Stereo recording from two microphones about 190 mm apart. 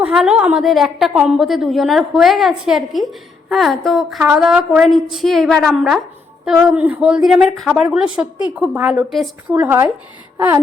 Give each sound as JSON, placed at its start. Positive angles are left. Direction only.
{"t": 0.0, "sound": "a woman's voice", "side_deg": -5}
{"t": 9.6, "sound": "speech", "side_deg": -10}
{"t": 10.3, "sound": "a sound", "side_deg": -20}